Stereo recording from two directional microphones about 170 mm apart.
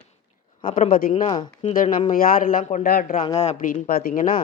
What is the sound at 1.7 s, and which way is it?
Speech, 50° left (ahead or behind).